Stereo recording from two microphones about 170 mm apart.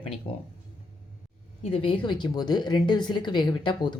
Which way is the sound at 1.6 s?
35° left (ahead or behind).